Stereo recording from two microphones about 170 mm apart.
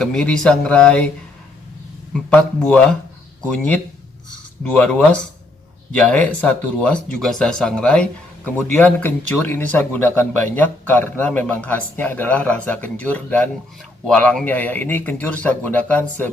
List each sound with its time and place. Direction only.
0.0 s speech: 5° left (ahead or behind)
2.3 s speech: 5° left (ahead or behind)
4.7 s speech: 5° left (ahead or behind)